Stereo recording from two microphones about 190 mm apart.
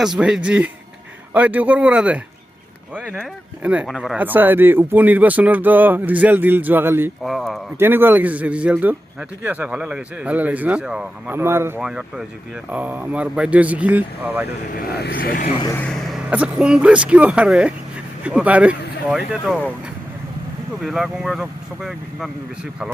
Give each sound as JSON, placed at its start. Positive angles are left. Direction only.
{"t": 0.0, "sound": "speech", "side_deg": -5}
{"t": 7.2, "sound": "speech", "side_deg": 0}
{"t": 7.8, "sound": "speech", "side_deg": -10}
{"t": 14.7, "sound": "speech", "side_deg": 50}
{"t": 15.7, "sound": "speech", "side_deg": 5}
{"t": 20.8, "sound": "speech", "side_deg": 0}